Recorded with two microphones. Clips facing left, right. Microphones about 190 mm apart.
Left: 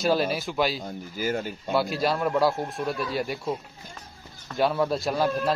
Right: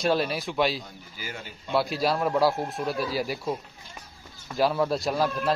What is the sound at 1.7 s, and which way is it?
Speech, centre (ahead or behind).